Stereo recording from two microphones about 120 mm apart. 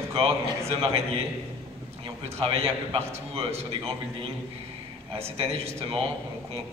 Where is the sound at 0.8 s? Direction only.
55° right (ahead or behind).